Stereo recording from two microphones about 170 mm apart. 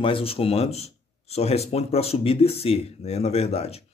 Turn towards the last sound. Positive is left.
turn(degrees=35)  # may be behind; listen again after turning